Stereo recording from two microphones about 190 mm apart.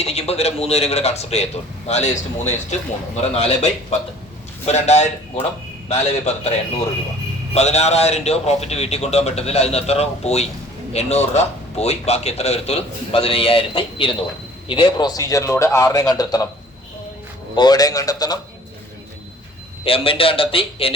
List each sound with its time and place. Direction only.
0.0 s a man's voice: 35° left (ahead or behind)
7.5 s a man's voice: 35° left (ahead or behind); by 16.5 s 20° left (ahead or behind)
17.5 s a man's voice: 20° left (ahead or behind)
19.8 s a man's voice: 30° left (ahead or behind)